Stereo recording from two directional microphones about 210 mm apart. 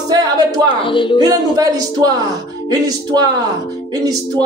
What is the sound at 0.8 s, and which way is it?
Speech, 25° left (ahead or behind).